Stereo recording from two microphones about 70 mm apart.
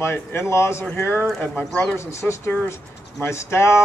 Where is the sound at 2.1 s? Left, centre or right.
Left.